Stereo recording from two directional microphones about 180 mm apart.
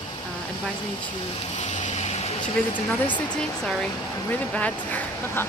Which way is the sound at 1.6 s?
40° left (ahead or behind).